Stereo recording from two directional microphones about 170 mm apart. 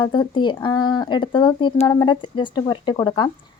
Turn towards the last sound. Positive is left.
turn(degrees=25)  # may be behind; listen again after turning